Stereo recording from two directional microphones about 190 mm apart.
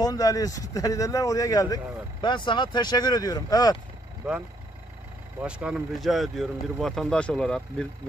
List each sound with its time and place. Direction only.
0.0 s speech: 20° left (ahead or behind)
4.2 s speech: 10° right (ahead or behind)